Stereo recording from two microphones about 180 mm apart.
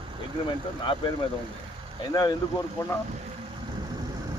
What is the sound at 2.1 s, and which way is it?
Speech, 20° left (ahead or behind).